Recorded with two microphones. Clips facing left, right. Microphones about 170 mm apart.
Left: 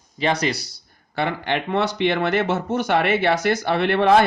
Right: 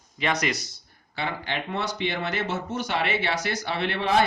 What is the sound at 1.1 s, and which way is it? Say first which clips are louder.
Speech: left 7 dB; 60° left (ahead or behind).